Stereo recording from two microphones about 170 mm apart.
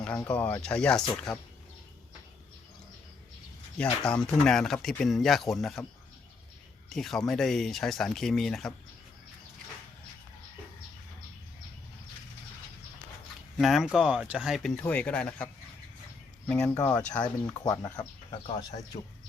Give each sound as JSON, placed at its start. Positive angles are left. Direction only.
{"t": 0.0, "sound": "speech", "side_deg": 5}
{"t": 4.0, "sound": "speech", "side_deg": 5}
{"t": 6.9, "sound": "speech", "side_deg": 0}
{"t": 13.6, "sound": "speech", "side_deg": 0}
{"t": 16.5, "sound": "speech", "side_deg": 15}
{"t": 17.0, "sound": "speech", "side_deg": 10}
{"t": 17.9, "sound": "speech", "side_deg": 25}